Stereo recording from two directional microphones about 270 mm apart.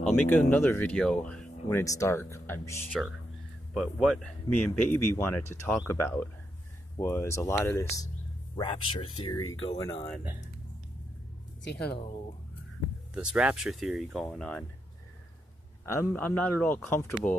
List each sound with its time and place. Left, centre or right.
0.5 s speech: centre
9.4 s speech: left
9.8 s speech: centre
11.6 s speech: left
13.1 s speech: centre
15.8 s speech: centre